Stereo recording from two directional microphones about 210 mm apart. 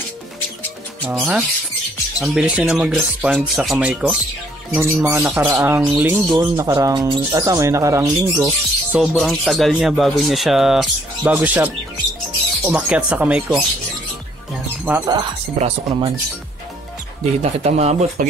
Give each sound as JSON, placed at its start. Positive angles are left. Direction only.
{"t": 1.0, "sound": "speech", "side_deg": -5}
{"t": 9.0, "sound": "speech", "side_deg": 0}
{"t": 14.9, "sound": "speech", "side_deg": -15}
{"t": 17.2, "sound": "speech", "side_deg": -30}